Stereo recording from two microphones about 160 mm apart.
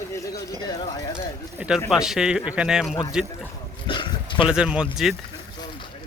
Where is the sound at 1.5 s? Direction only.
5° right (ahead or behind).